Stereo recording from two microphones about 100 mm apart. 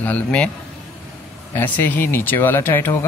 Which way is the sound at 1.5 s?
20° left (ahead or behind).